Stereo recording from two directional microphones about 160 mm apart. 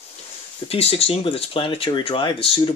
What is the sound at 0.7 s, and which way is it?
Speech, 40° left (ahead or behind).